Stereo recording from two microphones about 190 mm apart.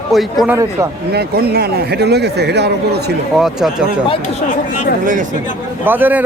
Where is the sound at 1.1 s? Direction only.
55° right (ahead or behind).